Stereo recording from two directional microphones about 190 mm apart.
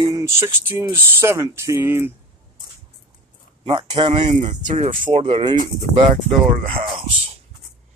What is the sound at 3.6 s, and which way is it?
Speech, 25° right (ahead or behind).